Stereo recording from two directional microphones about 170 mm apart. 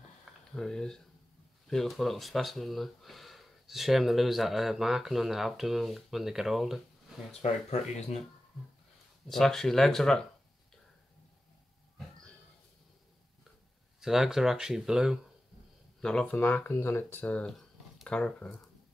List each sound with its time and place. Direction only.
0.2 s a sound: 5° left (ahead or behind)
1.7 s speech: centre (ahead or behind)
7.4 s speech: 40° left (ahead or behind)
9.3 s speech: centre (ahead or behind)
14.0 s speech: centre (ahead or behind)